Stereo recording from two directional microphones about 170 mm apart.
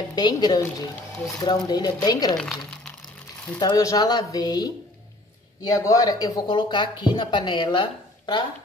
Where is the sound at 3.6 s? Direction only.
20° left (ahead or behind).